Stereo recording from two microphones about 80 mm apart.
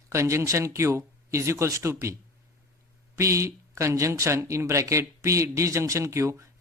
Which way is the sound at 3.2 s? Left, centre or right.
Right.